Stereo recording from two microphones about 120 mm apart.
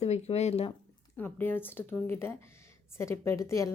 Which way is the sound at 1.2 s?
15° left (ahead or behind).